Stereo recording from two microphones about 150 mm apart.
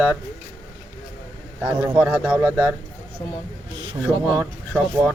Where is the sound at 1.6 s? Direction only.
10° right (ahead or behind).